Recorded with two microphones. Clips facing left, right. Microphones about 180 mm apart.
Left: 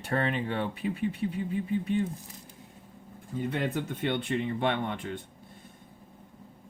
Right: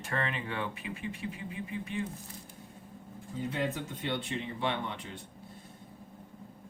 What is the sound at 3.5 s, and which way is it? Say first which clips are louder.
Speech: left 2 dB; 60° left (ahead or behind).